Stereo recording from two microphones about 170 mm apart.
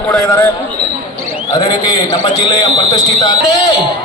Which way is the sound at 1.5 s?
25° left (ahead or behind).